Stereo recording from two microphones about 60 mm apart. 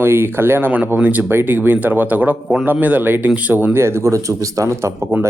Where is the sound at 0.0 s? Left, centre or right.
Right.